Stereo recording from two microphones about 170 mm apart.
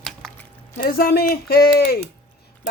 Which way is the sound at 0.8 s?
60° left (ahead or behind).